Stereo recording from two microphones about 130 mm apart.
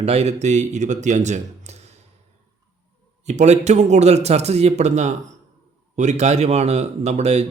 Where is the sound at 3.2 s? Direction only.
60° right (ahead or behind).